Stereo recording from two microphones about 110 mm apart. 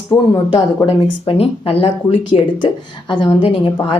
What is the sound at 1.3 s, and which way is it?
A woman's voice, 60° left (ahead or behind).